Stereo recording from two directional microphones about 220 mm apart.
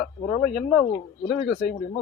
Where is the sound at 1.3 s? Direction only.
50° left (ahead or behind).